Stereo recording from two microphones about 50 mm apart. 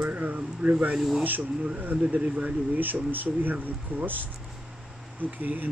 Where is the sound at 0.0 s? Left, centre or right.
Right.